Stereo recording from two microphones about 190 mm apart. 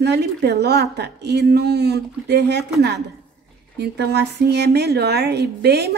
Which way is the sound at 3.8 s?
60° right (ahead or behind).